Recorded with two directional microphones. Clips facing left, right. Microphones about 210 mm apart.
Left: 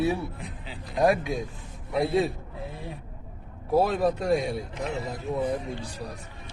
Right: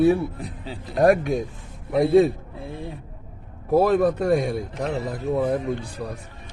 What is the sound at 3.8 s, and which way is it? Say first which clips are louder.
Speech: right 7 dB; 55° right (ahead or behind).